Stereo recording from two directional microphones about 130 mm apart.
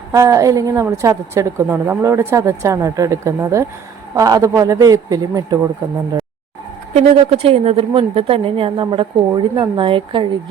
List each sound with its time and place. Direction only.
0.1 s a woman's voice: 25° right (ahead or behind)
6.9 s a woman's voice: 50° right (ahead or behind)